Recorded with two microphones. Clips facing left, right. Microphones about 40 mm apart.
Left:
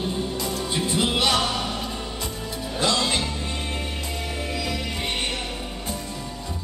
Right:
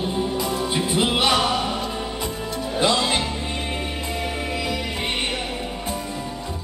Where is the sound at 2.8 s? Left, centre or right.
Centre.